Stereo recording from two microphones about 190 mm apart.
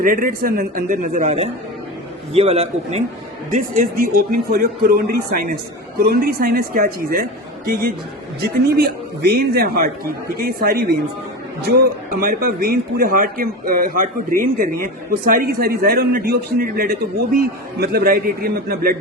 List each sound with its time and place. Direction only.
0.0 s a man's voice: 45° right (ahead or behind)
3.5 s a man's voice: 45° right (ahead or behind)
12.2 s a man's voice: 50° right (ahead or behind)